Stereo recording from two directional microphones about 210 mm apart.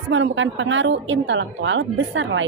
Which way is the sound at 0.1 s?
65° right (ahead or behind).